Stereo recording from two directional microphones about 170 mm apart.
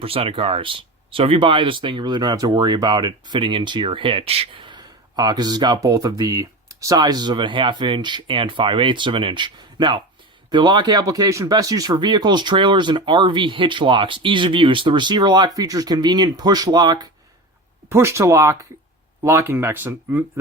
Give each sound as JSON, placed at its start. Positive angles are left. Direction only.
{"t": 0.0, "sound": "speech", "side_deg": -35}